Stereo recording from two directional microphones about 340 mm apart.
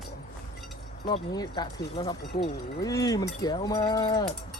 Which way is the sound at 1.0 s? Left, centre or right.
Centre.